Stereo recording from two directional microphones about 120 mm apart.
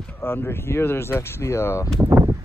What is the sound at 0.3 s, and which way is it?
Speech, 20° left (ahead or behind).